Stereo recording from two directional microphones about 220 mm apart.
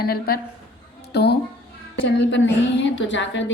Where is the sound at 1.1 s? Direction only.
50° left (ahead or behind).